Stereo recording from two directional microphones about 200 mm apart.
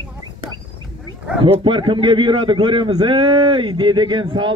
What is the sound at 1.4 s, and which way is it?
A man's voice, 25° right (ahead or behind).